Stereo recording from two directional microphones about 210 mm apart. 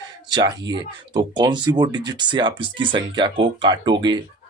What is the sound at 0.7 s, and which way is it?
Speech, 20° right (ahead or behind).